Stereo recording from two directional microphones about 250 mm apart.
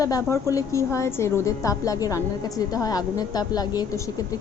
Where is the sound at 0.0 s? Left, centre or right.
Centre.